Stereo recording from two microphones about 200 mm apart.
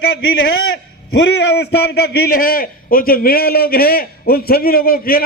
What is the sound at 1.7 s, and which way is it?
A man's voice, 55° left (ahead or behind).